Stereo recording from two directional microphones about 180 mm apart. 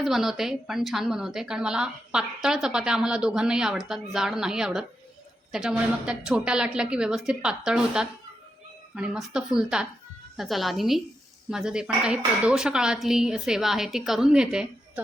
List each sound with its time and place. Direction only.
0.0 s a woman's voice: centre (ahead or behind)